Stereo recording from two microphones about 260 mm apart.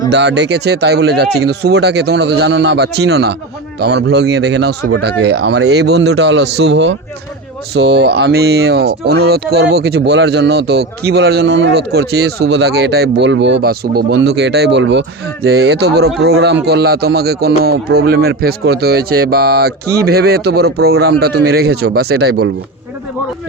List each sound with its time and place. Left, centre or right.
0.1 s speech: right